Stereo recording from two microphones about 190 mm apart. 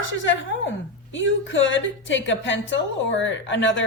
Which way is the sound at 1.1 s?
85° left.